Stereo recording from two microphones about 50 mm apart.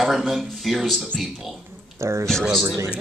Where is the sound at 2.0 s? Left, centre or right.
Right.